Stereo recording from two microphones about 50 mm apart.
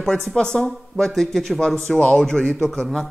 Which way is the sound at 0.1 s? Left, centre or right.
Centre.